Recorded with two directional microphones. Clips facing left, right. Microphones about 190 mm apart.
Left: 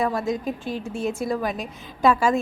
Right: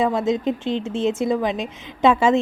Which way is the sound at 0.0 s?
20° right (ahead or behind).